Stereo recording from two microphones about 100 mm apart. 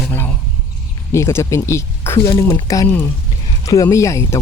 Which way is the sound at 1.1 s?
30° left (ahead or behind).